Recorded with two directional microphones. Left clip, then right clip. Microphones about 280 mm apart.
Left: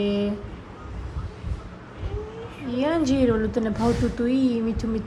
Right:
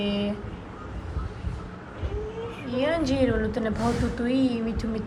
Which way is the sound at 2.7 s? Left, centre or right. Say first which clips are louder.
Left 2 dB; left.